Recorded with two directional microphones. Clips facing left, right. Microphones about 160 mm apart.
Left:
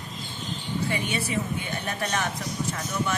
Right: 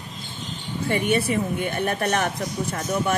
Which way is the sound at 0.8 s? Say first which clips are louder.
Right 9 dB; 55° right (ahead or behind).